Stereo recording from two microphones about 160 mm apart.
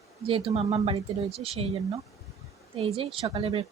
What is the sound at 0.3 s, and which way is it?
Speech, 35° right (ahead or behind).